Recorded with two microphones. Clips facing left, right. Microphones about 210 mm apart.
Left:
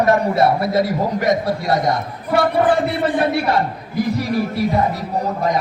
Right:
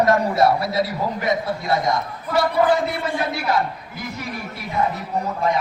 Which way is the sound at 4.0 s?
35° left (ahead or behind).